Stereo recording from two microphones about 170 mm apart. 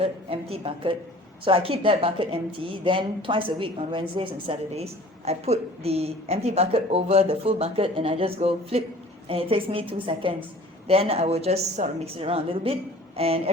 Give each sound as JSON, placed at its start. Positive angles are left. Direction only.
{"t": 0.0, "sound": "a woman's voice", "side_deg": -35}